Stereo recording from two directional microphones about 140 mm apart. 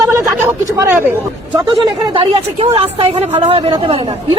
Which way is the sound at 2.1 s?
40° right (ahead or behind).